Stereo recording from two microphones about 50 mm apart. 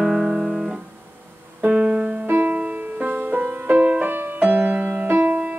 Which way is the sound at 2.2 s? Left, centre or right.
Right.